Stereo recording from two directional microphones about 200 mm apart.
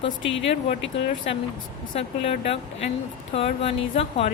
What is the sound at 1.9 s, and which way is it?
Speech, 30° left (ahead or behind).